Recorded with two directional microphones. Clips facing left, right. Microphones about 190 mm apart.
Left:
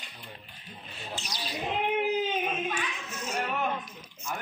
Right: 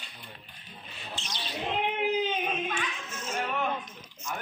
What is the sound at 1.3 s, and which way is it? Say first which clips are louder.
Speech: even; 10° left (ahead or behind).